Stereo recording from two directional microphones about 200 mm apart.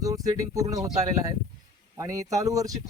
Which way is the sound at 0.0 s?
15° right (ahead or behind).